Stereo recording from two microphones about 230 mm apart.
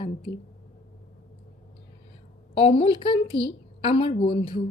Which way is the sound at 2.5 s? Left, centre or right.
Left.